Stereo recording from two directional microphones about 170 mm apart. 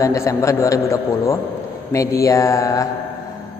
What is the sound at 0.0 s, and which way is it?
A man's voice, 20° left (ahead or behind).